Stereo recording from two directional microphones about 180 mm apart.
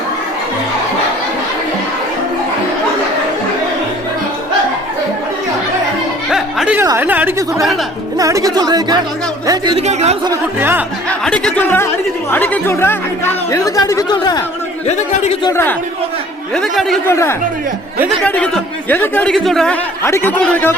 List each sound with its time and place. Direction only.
6.3 s music: 5° right (ahead or behind)
6.8 s speech: 10° right (ahead or behind)
9.7 s speech: 35° right (ahead or behind)
10.6 s speech: 10° right (ahead or behind)
11.1 s speech: 5° left (ahead or behind); by 14.4 s 20° left (ahead or behind)
14.8 s speech: 40° left (ahead or behind)
15.4 s speech: 15° left (ahead or behind)
16.6 s a man's voice: centre (ahead or behind)
17.1 s speech: 15° left (ahead or behind)
20.1 s speech: 15° left (ahead or behind)